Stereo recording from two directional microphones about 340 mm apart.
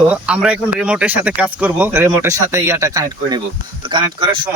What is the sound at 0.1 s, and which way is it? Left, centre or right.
Speech, centre.